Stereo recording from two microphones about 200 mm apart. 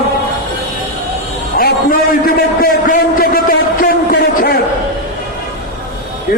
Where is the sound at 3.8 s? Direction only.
45° left (ahead or behind).